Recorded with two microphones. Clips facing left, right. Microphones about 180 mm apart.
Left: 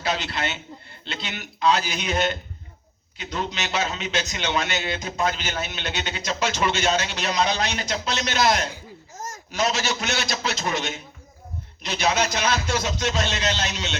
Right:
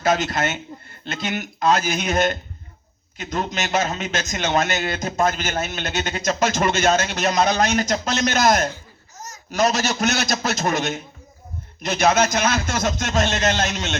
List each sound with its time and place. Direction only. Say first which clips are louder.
0.0 s a man's voice: right 6 dB; 45° right (ahead or behind)
9.1 s a sound: left 3 dB; 50° left (ahead or behind)
9.5 s a man's voice: right 5 dB; 45° right (ahead or behind)